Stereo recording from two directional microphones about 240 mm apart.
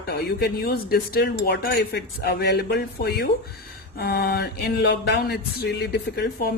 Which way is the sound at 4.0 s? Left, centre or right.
Left.